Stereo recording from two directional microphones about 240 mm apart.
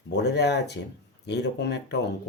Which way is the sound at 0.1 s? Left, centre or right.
Left.